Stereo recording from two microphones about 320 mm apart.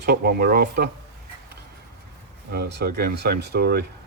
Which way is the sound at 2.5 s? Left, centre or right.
Right.